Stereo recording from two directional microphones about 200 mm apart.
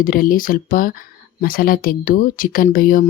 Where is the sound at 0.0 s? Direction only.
45° left (ahead or behind).